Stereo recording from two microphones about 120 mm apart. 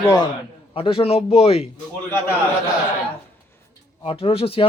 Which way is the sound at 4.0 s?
50° left (ahead or behind).